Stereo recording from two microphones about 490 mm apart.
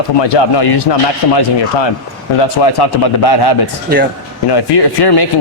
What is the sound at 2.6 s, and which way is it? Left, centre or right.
A man's voice, left.